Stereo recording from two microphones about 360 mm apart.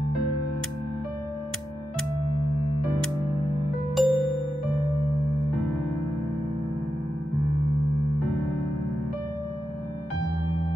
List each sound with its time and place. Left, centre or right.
3.9 s music: centre